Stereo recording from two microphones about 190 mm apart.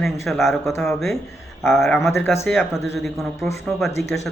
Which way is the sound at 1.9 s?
15° left (ahead or behind).